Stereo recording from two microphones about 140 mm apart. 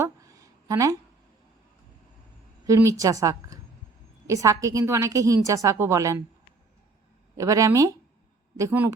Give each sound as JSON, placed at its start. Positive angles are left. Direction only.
{"t": 0.0, "sound": "a sound", "side_deg": -25}
{"t": 2.6, "sound": "a woman's voice", "side_deg": -20}
{"t": 7.3, "sound": "a woman's voice", "side_deg": -25}